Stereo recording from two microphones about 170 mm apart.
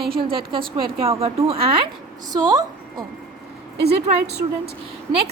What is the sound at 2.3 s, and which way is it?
Speech, 25° right (ahead or behind).